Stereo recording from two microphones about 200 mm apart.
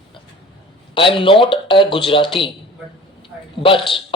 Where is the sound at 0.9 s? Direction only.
25° left (ahead or behind).